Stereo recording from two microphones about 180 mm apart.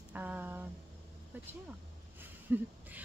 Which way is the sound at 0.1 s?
10° right (ahead or behind).